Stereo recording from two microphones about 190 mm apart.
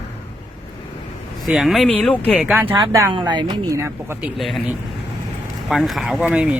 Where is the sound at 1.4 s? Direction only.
Centre (ahead or behind).